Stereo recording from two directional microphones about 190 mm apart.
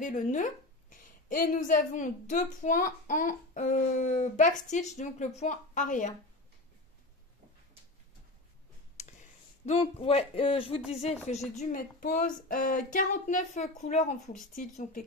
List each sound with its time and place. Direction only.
0.0 s a woman's voice: 40° left (ahead or behind)
8.9 s a sound: 35° left (ahead or behind)
10.9 s a woman's voice: 35° left (ahead or behind)
11.5 s a child's voice: 45° left (ahead or behind)